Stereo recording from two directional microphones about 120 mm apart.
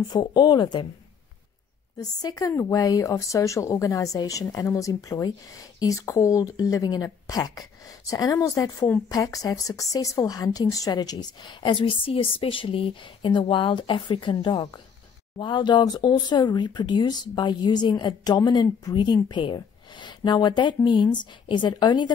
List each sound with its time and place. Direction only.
0.1 s speech: 35° left (ahead or behind)
2.0 s speech: 35° left (ahead or behind)